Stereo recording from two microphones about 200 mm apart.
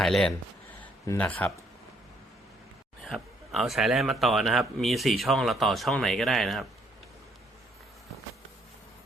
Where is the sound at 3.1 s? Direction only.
Centre (ahead or behind).